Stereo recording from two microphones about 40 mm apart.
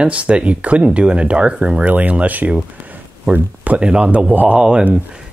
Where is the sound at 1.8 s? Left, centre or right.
Right.